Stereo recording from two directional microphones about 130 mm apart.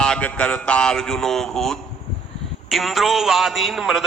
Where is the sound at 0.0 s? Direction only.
10° left (ahead or behind).